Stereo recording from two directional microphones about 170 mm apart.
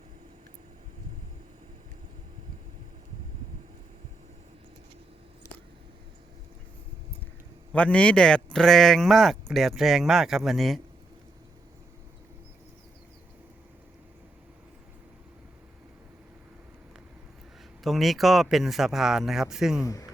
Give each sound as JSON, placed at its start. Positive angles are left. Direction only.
{"t": 7.7, "sound": "speech", "side_deg": 5}
{"t": 17.8, "sound": "speech", "side_deg": 0}
{"t": 19.8, "sound": "speech", "side_deg": 20}